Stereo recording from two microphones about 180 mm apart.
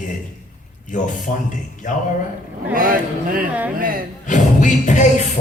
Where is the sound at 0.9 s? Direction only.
45° left (ahead or behind).